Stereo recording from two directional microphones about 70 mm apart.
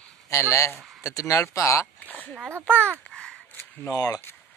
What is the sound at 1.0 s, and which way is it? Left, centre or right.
Speech, left.